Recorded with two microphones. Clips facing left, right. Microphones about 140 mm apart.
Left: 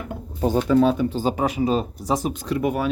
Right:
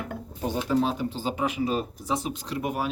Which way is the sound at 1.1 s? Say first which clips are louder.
Left 6 dB; 40° left (ahead or behind).